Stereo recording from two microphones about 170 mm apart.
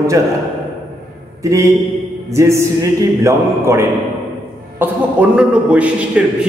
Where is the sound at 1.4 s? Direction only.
20° right (ahead or behind).